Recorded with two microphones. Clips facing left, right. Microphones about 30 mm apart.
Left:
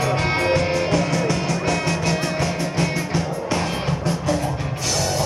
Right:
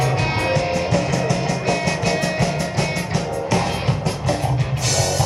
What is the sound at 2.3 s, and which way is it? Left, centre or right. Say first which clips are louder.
Music: right 1 dB; right.